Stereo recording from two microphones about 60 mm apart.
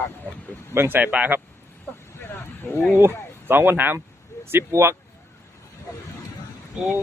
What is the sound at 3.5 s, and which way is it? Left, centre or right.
Speech, right.